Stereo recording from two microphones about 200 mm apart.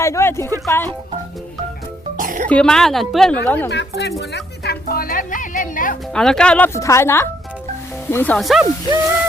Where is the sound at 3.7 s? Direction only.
60° left (ahead or behind).